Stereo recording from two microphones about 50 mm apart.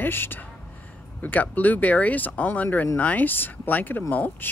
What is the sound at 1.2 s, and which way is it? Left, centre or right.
Speech, left.